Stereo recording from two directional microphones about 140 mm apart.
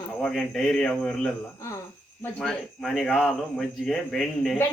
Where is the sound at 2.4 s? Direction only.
Centre (ahead or behind).